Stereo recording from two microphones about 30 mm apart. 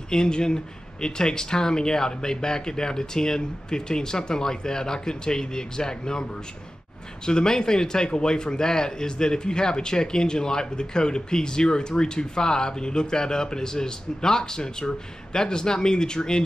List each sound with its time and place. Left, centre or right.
0.1 s speech: left
7.2 s speech: left